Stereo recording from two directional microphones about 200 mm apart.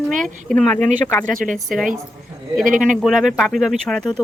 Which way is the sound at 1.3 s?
40° right (ahead or behind).